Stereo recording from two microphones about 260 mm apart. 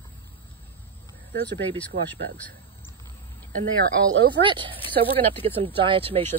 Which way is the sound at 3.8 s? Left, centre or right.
Right.